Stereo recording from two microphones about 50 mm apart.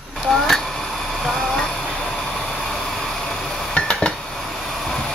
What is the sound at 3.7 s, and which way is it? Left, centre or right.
Dishes, centre.